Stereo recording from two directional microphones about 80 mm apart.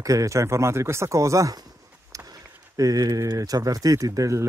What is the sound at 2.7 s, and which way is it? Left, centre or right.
Speech, right.